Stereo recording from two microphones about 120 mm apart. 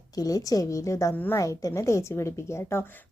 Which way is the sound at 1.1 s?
15° left (ahead or behind).